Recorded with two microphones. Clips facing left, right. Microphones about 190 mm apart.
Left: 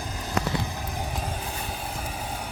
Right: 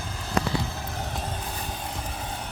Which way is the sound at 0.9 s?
10° left (ahead or behind).